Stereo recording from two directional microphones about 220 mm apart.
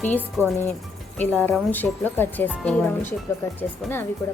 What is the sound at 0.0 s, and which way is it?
Speech, 10° left (ahead or behind).